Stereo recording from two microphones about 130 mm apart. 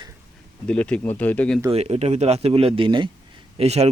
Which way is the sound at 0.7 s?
10° left (ahead or behind).